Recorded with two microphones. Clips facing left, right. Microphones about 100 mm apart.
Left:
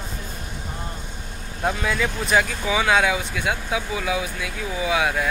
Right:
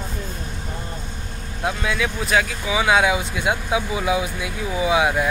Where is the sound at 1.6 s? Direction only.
Centre (ahead or behind).